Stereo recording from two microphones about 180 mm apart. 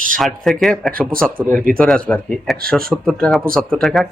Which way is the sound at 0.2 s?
Centre (ahead or behind).